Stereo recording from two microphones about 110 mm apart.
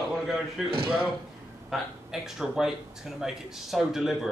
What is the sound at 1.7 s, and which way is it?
Speech, 5° right (ahead or behind).